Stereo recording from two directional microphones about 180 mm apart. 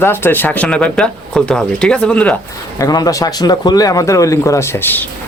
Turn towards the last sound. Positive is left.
turn(degrees=10)  # may be behind; listen again after turning